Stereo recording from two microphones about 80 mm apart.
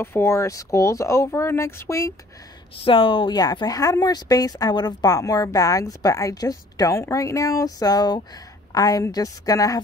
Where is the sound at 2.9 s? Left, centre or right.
Left.